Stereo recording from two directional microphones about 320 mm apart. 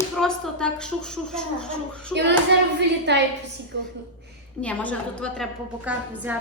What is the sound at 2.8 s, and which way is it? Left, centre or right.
A woman's voice, right.